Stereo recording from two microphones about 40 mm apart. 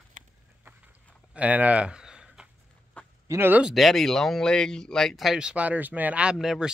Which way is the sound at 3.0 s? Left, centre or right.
Left.